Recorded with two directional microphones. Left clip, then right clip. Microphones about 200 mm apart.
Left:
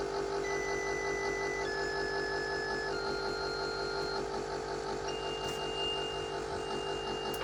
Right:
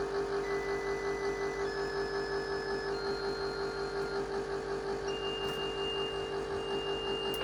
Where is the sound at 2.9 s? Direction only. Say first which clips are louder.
Even; 5° left (ahead or behind).